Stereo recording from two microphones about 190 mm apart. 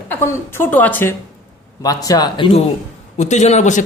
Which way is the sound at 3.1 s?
40° left (ahead or behind).